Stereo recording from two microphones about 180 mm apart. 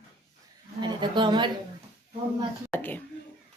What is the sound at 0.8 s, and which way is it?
Speech, 25° right (ahead or behind).